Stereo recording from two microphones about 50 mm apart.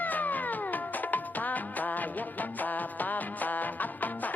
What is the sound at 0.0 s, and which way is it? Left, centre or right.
Music, left.